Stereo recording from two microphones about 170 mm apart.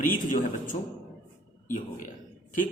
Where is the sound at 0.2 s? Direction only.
50° left (ahead or behind).